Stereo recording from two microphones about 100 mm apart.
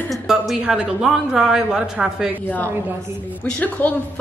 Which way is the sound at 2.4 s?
15° left (ahead or behind).